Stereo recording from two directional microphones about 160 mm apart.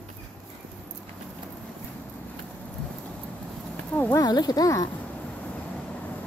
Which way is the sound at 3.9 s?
10° left (ahead or behind).